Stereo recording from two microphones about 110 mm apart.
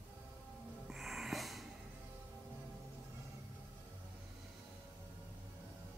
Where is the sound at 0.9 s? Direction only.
Centre (ahead or behind).